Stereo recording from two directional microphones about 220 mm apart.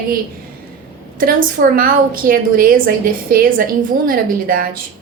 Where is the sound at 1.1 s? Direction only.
40° right (ahead or behind).